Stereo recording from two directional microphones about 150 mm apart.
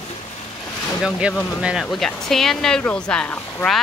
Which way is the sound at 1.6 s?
5° right (ahead or behind).